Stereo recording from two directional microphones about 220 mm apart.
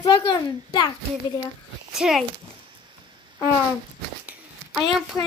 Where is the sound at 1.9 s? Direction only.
Centre (ahead or behind).